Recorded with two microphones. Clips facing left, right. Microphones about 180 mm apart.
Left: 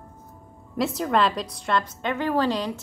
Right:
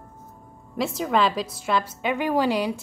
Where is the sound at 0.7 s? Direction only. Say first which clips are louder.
Even; centre (ahead or behind).